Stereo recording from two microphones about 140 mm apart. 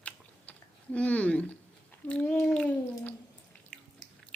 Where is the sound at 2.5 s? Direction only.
10° left (ahead or behind).